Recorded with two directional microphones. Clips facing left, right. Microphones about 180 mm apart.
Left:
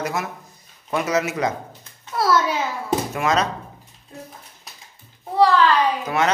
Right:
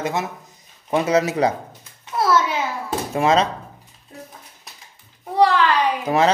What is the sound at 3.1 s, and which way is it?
Speech, 30° right (ahead or behind).